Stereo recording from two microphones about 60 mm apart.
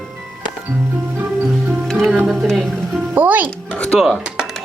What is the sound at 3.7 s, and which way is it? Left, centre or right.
Music, centre.